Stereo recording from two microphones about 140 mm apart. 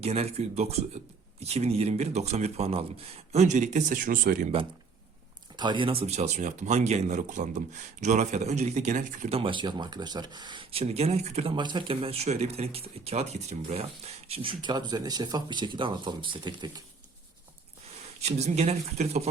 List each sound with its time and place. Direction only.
0.0 s speech: 45° right (ahead or behind); by 4.4 s 90° right
5.5 s speech: 35° right (ahead or behind); by 9.3 s 60° right (ahead or behind)
9.3 s speech: 40° right (ahead or behind)
11.5 s speech: 35° right (ahead or behind)
17.8 s speech: 50° right (ahead or behind)